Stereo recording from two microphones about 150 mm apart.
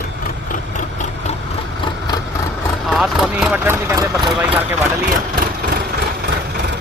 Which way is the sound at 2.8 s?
Centre (ahead or behind).